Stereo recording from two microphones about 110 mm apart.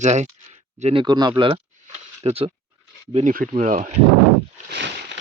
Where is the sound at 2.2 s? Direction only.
60° right (ahead or behind).